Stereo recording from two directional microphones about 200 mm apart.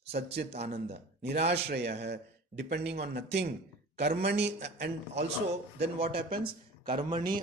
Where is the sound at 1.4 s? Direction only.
55° right (ahead or behind).